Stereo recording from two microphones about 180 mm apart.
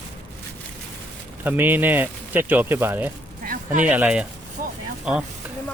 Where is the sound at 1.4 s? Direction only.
10° right (ahead or behind).